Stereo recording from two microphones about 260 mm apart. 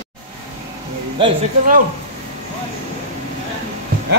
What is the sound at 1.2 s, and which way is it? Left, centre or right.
Speech, centre.